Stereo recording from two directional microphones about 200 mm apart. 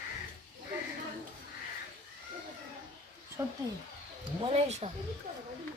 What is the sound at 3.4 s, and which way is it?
Speech, 15° right (ahead or behind).